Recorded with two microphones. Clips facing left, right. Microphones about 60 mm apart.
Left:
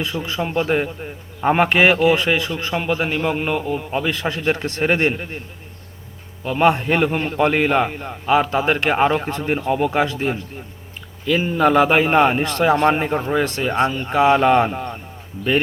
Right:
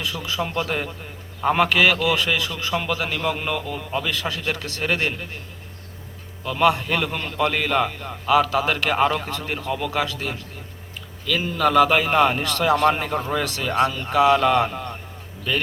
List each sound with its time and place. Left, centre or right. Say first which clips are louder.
0.0 s a man's voice: left 3 dB; left
6.4 s a man's voice: left 3 dB; left